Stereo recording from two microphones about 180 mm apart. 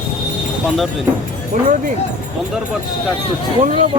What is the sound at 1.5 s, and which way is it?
Speech, 45° right (ahead or behind).